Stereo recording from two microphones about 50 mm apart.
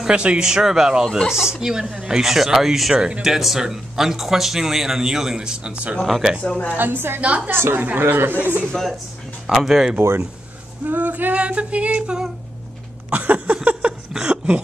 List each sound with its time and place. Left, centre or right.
0.0 s a sound: right
0.5 s speech: centre
1.0 s speech: centre
1.3 s speech: centre
5.9 s speech: centre
6.4 s a woman's voice: left
6.7 s a woman's voice: right
7.2 s a sound: right
7.4 s a woman's voice: right
8.7 s speech: centre
10.9 s a woman's voice: right
11.3 s a sound: right
14.1 s a sound: centre